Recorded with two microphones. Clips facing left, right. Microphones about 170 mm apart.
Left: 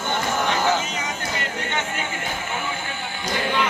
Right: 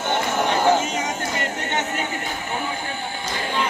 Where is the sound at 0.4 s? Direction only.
55° right (ahead or behind).